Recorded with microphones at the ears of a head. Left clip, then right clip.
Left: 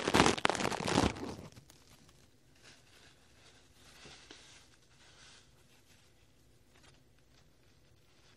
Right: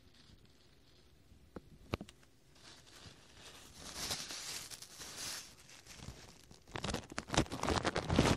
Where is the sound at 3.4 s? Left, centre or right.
Right.